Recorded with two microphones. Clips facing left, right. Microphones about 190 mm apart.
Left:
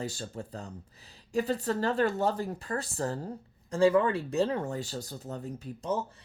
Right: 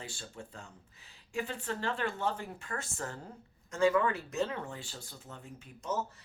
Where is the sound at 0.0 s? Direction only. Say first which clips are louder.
Left 9 dB; 40° left (ahead or behind).